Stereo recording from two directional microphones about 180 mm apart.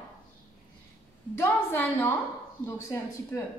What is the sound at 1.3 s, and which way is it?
A woman's voice, 10° left (ahead or behind).